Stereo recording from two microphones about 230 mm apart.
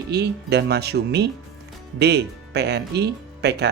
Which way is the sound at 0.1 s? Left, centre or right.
Right.